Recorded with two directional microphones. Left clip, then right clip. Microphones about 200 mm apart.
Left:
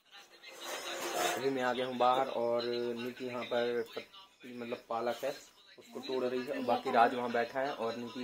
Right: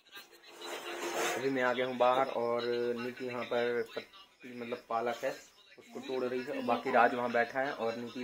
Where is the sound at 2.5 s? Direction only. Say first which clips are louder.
Right 2 dB; 20° right (ahead or behind).